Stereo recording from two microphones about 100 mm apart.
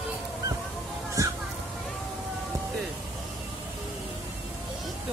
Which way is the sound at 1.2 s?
35° right (ahead or behind).